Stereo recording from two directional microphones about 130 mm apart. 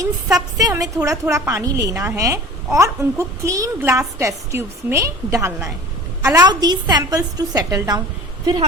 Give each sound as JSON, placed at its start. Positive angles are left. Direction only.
{"t": 0.3, "sound": "a woman's voice", "side_deg": -25}